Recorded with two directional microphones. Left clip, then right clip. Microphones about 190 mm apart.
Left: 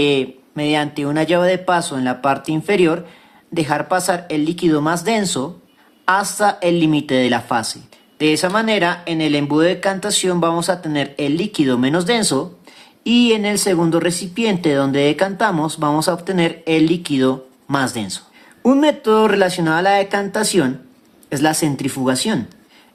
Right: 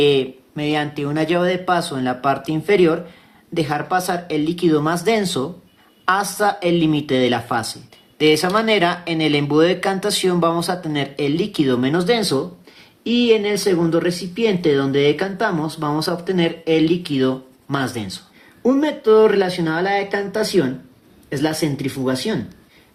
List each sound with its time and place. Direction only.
0.0 s speech: 15° left (ahead or behind); by 22.4 s 35° left (ahead or behind)